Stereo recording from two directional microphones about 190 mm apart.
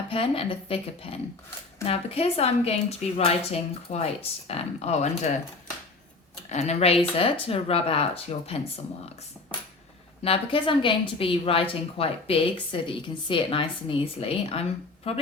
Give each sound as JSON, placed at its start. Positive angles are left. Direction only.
{"t": 0.1, "sound": "a woman's voice", "side_deg": 30}
{"t": 6.5, "sound": "a woman's voice", "side_deg": 35}
{"t": 10.2, "sound": "a woman's voice", "side_deg": 30}